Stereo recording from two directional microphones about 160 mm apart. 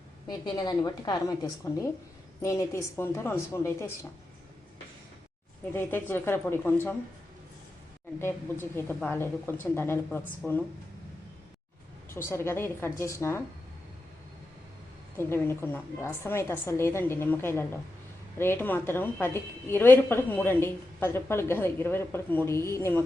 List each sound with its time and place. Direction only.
0.3 s a woman's voice: 25° left (ahead or behind)
5.7 s a woman's voice: 15° left (ahead or behind)
8.2 s a woman's voice: 15° left (ahead or behind)
12.1 s a woman's voice: 15° left (ahead or behind)
15.2 s a woman's voice: 15° left (ahead or behind)